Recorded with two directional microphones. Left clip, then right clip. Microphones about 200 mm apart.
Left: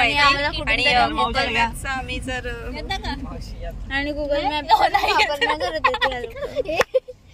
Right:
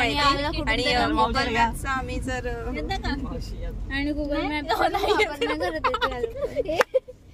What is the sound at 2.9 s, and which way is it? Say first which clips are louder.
Speech: left 4 dB; 50° right (ahead or behind).